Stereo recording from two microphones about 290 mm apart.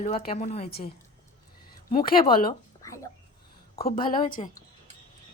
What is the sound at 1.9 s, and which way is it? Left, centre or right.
Speech, left.